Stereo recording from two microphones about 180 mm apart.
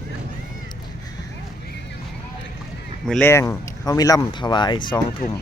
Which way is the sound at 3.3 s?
15° left (ahead or behind).